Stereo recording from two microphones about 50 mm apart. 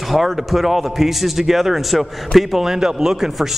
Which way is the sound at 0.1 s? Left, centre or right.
Centre.